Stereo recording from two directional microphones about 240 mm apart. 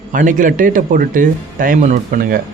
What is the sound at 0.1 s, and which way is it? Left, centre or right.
Speech, right.